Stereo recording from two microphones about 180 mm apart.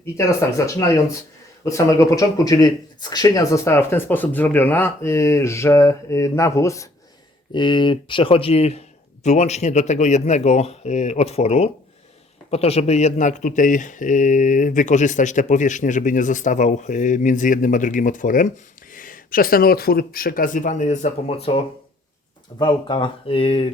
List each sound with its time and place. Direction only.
0.0 s speech: 15° left (ahead or behind)